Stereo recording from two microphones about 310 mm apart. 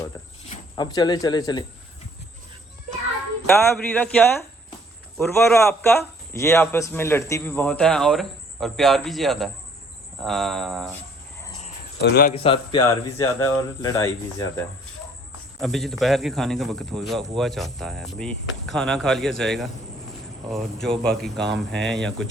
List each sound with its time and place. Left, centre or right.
0.5 s speech: centre
3.8 s a man's voice: centre
11.6 s a sound: left
12.3 s a man's voice: centre